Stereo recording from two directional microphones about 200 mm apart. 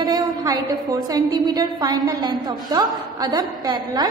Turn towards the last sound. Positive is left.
turn(degrees=-20)  # may be behind; listen again after turning